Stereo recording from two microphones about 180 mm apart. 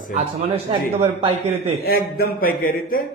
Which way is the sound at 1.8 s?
55° left (ahead or behind).